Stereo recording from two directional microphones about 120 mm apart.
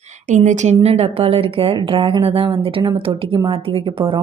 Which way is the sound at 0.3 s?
90° right.